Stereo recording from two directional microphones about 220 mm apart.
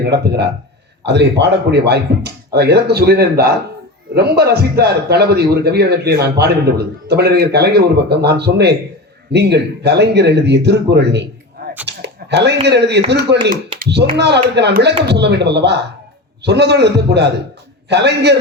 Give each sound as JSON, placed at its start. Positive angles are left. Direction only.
{"t": 0.0, "sound": "a man's voice", "side_deg": -45}
{"t": 11.9, "sound": "a sound", "side_deg": -50}
{"t": 12.6, "sound": "a man's voice", "side_deg": -50}